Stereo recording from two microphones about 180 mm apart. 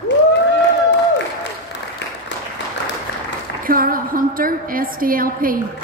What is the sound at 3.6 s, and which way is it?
A woman's voice, 50° right (ahead or behind).